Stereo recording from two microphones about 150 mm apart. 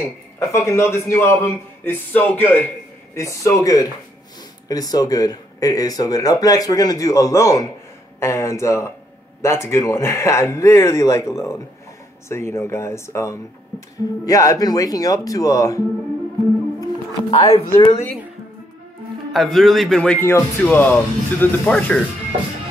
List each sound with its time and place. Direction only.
0.4 s speech: 20° left (ahead or behind)
16.8 s speech: 35° left (ahead or behind)
19.3 s speech: centre (ahead or behind)